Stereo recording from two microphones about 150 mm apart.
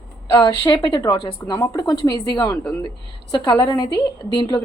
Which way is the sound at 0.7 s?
35° left (ahead or behind).